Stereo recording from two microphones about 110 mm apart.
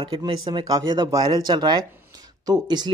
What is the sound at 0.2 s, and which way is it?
Speech, 40° right (ahead or behind).